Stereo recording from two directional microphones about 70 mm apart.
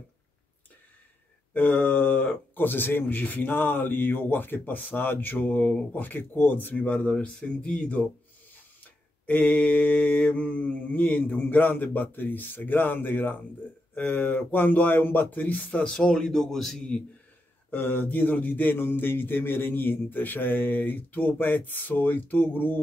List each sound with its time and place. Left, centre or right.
1.5 s speech: left
9.2 s speech: left; by 16.8 s centre
17.6 s speech: left